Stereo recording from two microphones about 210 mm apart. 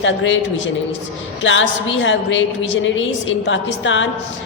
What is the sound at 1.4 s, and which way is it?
A woman's voice, 65° left (ahead or behind).